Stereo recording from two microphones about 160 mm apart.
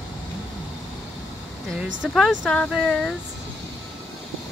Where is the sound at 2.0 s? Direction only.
Centre (ahead or behind).